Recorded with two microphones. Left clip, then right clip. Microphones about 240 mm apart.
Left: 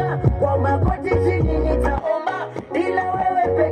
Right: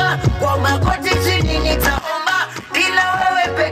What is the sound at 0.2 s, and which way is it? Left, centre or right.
Music, right.